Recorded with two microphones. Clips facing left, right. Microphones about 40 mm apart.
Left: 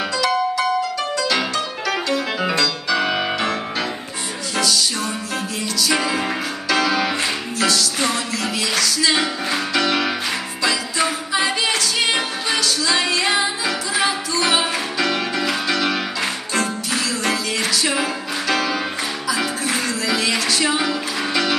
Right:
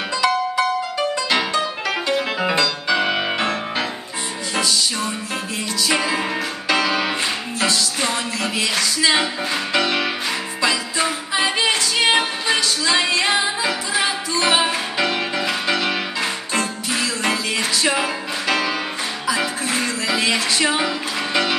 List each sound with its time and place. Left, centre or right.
0.2 s music: right
3.3 s music: right
4.6 s music: right
8.6 s music: right
11.3 s music: right
16.2 s music: centre
20.1 s music: right